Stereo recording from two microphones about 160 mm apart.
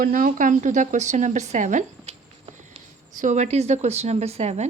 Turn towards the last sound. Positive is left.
turn(degrees=-45)  # may be behind; listen again after turning